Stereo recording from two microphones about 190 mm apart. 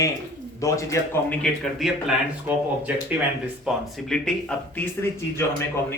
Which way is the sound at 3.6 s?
Centre (ahead or behind).